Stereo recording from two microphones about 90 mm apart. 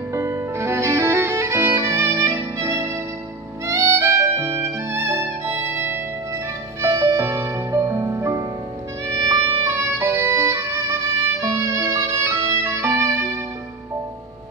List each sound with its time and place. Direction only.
0.1 s music: 30° right (ahead or behind)
9.3 s violin: 30° right (ahead or behind)